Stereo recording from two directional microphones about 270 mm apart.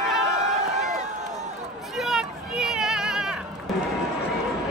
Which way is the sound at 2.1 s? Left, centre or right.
Centre.